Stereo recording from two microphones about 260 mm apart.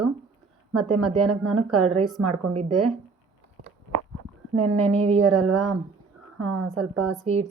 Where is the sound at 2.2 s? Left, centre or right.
Right.